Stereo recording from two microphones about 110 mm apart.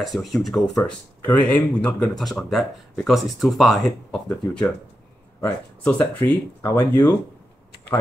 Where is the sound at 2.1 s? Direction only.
Centre (ahead or behind).